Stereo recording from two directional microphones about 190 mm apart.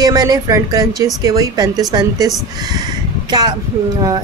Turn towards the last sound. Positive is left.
turn(degrees=-20)  # may be behind; listen again after turning